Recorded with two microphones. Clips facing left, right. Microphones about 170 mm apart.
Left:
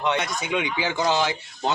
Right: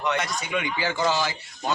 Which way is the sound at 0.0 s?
20° left (ahead or behind).